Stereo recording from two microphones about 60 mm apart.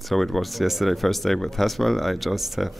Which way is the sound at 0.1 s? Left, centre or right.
Centre.